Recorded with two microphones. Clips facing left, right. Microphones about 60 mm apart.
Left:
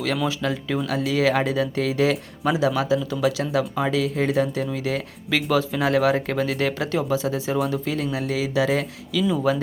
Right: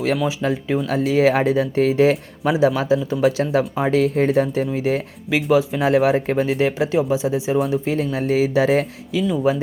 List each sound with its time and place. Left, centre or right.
0.4 s speech: right
4.0 s speech: right
5.5 s speech: centre
5.8 s speech: right
7.7 s speech: right
9.1 s speech: right